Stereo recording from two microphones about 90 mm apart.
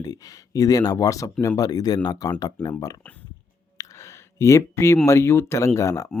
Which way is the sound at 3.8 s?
35° left (ahead or behind).